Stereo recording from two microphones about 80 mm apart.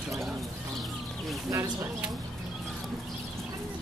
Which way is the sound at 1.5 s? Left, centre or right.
Right.